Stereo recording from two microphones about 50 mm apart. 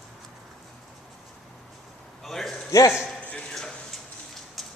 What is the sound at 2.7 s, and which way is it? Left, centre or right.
Speech, left.